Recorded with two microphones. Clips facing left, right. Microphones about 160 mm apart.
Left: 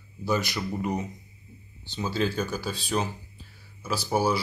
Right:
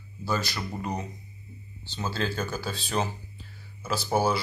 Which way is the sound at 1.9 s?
15° left (ahead or behind).